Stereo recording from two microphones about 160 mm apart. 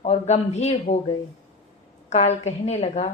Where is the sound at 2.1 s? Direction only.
45° left (ahead or behind).